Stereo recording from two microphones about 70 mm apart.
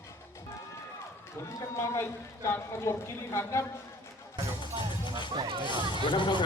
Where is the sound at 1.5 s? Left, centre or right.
Left.